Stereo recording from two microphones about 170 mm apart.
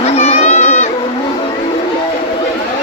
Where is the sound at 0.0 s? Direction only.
40° left (ahead or behind).